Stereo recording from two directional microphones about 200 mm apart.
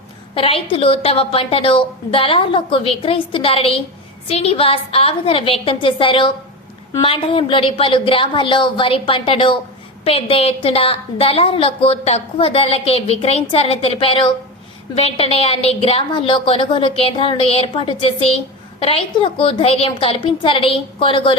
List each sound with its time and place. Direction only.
0.3 s a woman's voice: 30° left (ahead or behind)